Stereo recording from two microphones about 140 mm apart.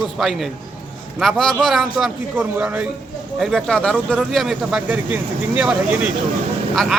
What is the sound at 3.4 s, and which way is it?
Speech, centre (ahead or behind).